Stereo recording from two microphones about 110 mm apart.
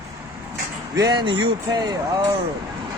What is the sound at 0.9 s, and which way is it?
Speech, 35° right (ahead or behind).